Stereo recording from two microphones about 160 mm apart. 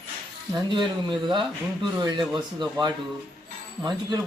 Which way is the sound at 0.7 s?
30° right (ahead or behind).